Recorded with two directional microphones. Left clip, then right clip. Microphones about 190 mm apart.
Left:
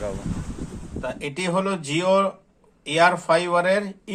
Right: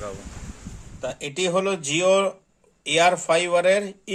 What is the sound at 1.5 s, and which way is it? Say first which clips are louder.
Speech: even; 40° right (ahead or behind).